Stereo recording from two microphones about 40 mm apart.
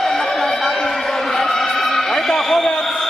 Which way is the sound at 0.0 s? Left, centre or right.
Centre.